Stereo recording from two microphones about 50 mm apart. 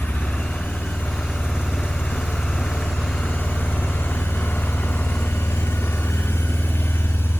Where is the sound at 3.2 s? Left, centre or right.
Left.